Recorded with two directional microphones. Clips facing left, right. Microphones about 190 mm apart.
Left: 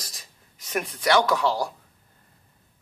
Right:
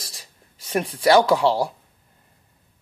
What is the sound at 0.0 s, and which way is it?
Writing, 30° right (ahead or behind).